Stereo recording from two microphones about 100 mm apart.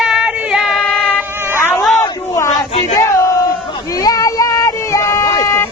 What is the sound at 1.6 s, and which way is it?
Cat, 25° left (ahead or behind).